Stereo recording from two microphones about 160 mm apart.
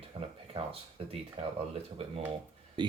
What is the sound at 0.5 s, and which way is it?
Speech, 35° right (ahead or behind).